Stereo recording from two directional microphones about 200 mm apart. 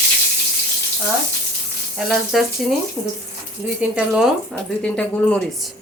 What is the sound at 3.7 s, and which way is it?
Speech, 5° right (ahead or behind).